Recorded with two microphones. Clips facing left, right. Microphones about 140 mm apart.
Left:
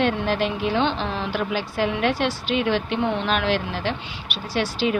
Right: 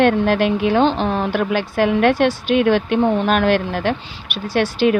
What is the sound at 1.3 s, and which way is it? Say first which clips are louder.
Speech: right 6 dB; 60° right (ahead or behind).